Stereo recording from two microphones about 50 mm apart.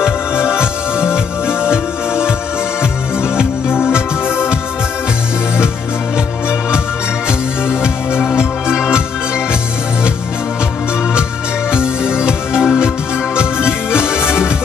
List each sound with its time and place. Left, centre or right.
0.5 s music: centre
3.6 s music: left
8.7 s music: centre
11.7 s music: centre
13.9 s music: centre